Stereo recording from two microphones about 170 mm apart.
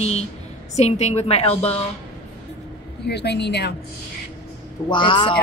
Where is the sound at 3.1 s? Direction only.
80° left.